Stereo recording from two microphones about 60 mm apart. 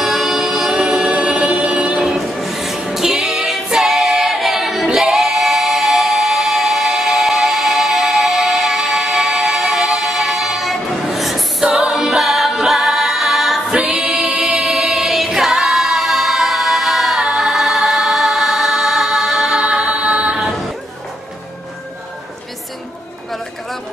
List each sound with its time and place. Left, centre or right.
0.0 s music: centre
2.1 s music: centre
2.9 s singing: centre
11.6 s a capella: centre
13.9 s choir: centre
19.6 s a capella: centre